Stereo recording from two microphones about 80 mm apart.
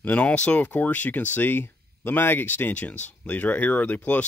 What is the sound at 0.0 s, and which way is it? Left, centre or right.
Speech, centre.